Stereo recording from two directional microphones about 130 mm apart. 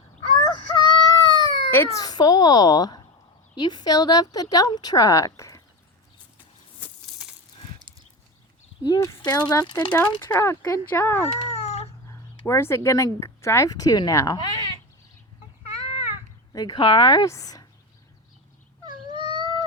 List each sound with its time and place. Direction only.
0.4 s baby cry: 35° left (ahead or behind)
1.7 s speech: 15° left (ahead or behind)
2.0 s a child's voice: 30° left (ahead or behind)
8.8 s speech: 25° left (ahead or behind)
9.9 s speech: 15° left (ahead or behind)
11.3 s cat: 55° left (ahead or behind)
12.5 s speech: 20° left (ahead or behind)
16.5 s speech: 30° left (ahead or behind)
16.8 s a child's voice: 40° left (ahead or behind)
18.9 s dog: 35° right (ahead or behind)